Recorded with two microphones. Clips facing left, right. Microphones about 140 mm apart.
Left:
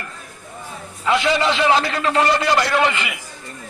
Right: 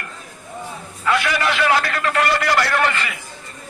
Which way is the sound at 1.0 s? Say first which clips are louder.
Left 2 dB; 20° left (ahead or behind).